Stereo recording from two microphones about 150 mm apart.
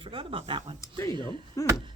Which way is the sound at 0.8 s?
20° left (ahead or behind).